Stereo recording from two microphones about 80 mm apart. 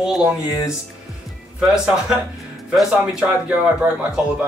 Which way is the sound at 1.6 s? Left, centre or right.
Centre.